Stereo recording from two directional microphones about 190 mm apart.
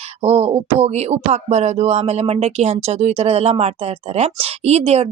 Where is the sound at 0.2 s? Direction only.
30° right (ahead or behind).